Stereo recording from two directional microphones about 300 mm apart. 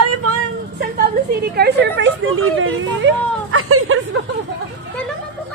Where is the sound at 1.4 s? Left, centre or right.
Right.